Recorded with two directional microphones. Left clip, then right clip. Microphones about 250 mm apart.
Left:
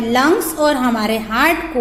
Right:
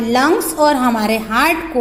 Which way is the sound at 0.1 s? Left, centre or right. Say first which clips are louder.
Even; centre.